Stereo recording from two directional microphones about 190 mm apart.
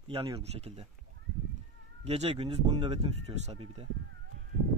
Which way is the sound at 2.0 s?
35° right (ahead or behind).